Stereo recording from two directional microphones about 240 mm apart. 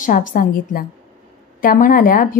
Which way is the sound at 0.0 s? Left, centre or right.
Left.